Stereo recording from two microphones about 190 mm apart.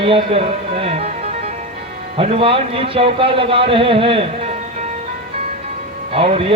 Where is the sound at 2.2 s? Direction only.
30° right (ahead or behind).